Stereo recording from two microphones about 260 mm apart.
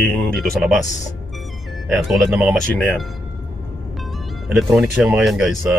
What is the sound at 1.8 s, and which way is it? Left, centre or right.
Speech, centre.